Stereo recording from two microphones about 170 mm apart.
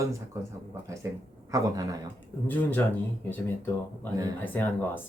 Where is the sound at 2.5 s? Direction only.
10° left (ahead or behind).